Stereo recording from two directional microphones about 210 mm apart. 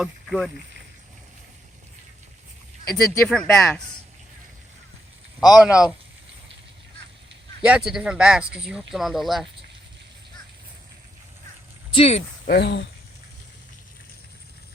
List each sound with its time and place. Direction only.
0.0 s speech: centre (ahead or behind)
2.9 s speech: 5° left (ahead or behind)
5.4 s speech: 5° right (ahead or behind)
7.6 s speech: 5° right (ahead or behind)
11.9 s speech: 30° left (ahead or behind)
12.5 s speech: 50° left (ahead or behind)